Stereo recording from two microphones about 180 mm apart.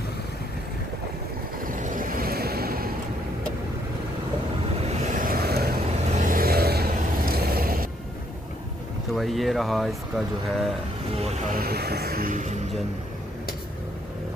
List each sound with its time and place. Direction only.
1.6 s boat: 45° right (ahead or behind)
4.7 s vehicle: 35° right (ahead or behind); by 7.9 s 55° right (ahead or behind)
9.1 s speech: centre (ahead or behind)
11.1 s music: 35° right (ahead or behind)
11.5 s a sound: 60° right (ahead or behind)